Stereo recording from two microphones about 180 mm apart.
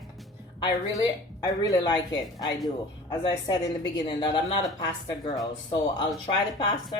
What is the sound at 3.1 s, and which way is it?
A woman's voice, 20° left (ahead or behind).